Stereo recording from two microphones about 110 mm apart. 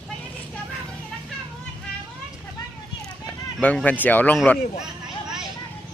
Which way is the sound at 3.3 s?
10° left (ahead or behind).